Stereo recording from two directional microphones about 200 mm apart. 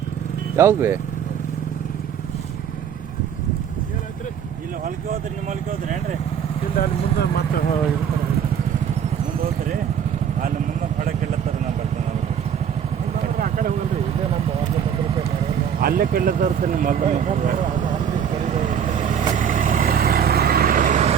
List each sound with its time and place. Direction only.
0.5 s speech: 15° right (ahead or behind)
5.1 s a sound: 40° right (ahead or behind)
6.7 s speech: 55° left (ahead or behind)
13.4 s vehicle: 45° right (ahead or behind)
15.8 s speech: 45° right (ahead or behind)
18.4 s vehicle: 40° right (ahead or behind)